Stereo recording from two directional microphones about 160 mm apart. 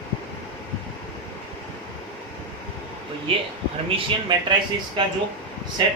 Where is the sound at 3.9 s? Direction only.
30° right (ahead or behind).